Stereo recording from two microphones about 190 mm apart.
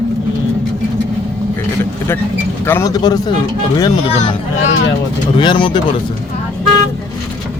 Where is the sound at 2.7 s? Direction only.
15° left (ahead or behind).